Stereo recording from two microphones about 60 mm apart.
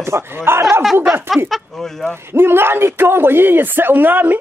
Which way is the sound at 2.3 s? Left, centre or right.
Right.